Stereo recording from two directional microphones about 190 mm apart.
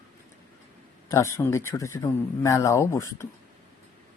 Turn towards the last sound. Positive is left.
turn(degrees=15)  # may be behind; listen again after turning